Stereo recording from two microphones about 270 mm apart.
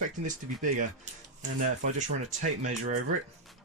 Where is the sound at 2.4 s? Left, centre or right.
Right.